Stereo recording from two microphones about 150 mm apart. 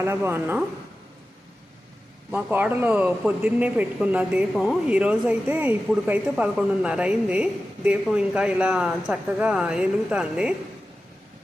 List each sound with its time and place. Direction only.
0.0 s speech: 15° right (ahead or behind)
2.3 s speech: 10° right (ahead or behind)